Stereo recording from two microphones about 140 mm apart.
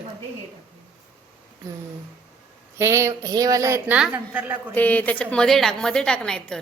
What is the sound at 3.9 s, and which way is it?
Speech, 5° right (ahead or behind).